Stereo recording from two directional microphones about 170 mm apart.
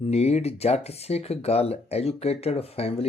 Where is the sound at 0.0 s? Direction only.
40° left (ahead or behind).